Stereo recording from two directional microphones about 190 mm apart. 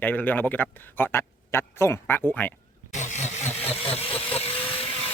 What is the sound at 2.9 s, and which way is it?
Vehicle, 40° left (ahead or behind).